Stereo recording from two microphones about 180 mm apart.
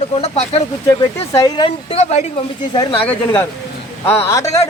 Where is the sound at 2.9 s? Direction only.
10° left (ahead or behind).